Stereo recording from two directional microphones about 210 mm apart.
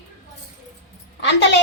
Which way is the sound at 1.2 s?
55° left (ahead or behind).